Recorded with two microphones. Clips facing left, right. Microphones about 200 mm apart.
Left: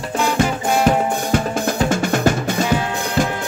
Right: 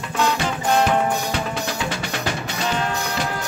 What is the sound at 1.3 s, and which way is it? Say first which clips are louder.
Drum: left 6 dB; 45° left (ahead or behind).